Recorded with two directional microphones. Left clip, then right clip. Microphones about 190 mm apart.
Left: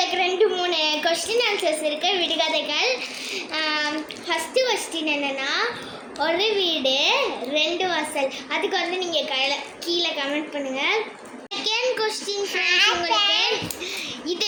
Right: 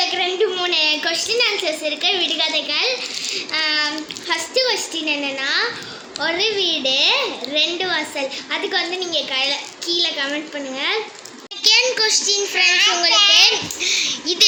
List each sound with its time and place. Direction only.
0.2 s a child's voice: 5° right (ahead or behind)
12.5 s a child's voice: 65° left (ahead or behind)
13.3 s a child's voice: 5° left (ahead or behind)